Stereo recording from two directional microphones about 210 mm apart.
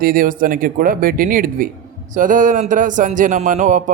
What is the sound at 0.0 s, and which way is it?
Speech, 40° right (ahead or behind).